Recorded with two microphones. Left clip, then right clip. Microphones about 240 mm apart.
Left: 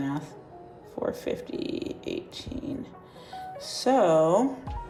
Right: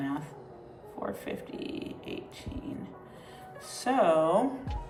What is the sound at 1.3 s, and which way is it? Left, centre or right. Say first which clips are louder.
Speech: left 6 dB; left.